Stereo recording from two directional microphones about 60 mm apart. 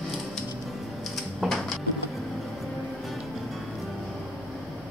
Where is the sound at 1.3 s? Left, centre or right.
Centre.